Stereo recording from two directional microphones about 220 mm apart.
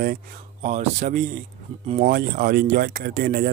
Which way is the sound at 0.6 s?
30° right (ahead or behind).